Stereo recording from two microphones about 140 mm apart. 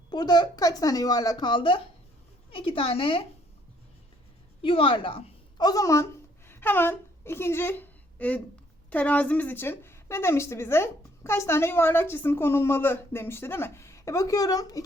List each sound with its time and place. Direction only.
0.1 s a woman's voice: 30° left (ahead or behind)
4.6 s a woman's voice: 40° left (ahead or behind)